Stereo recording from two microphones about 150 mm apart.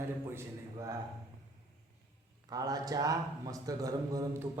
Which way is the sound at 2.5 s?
25° right (ahead or behind).